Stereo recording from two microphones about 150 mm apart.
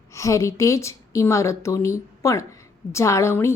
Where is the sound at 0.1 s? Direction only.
20° left (ahead or behind).